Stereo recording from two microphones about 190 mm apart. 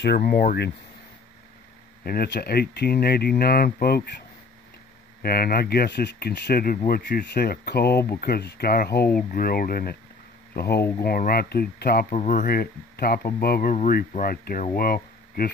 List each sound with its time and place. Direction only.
0.0 s speech: 55° left (ahead or behind)
2.0 s speech: 55° left (ahead or behind)
5.2 s speech: 55° left (ahead or behind)
6.9 s speech: 65° left (ahead or behind)